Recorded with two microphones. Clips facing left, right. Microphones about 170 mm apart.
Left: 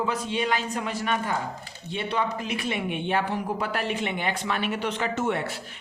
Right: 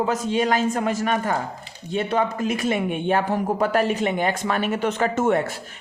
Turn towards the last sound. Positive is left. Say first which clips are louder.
# right 7 dB
turn(degrees=-45)  # may be behind; listen again after turning